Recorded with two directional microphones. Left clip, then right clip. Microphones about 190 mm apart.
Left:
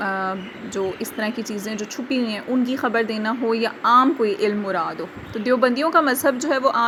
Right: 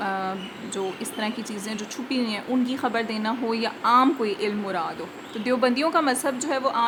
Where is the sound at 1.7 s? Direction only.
10° left (ahead or behind).